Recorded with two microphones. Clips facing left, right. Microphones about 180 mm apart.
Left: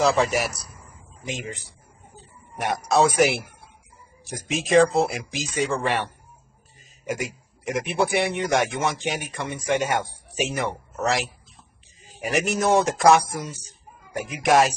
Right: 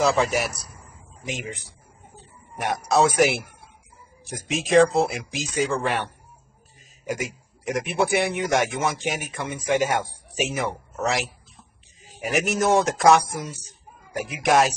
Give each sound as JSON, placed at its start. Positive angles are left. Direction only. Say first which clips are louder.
{"t": 0.0, "sound": "a man's voice", "louder": "even", "side_deg": 0}
{"t": 7.1, "sound": "a man's voice", "louder": "even", "side_deg": 0}